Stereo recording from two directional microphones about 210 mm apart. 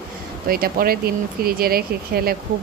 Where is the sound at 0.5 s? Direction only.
45° right (ahead or behind).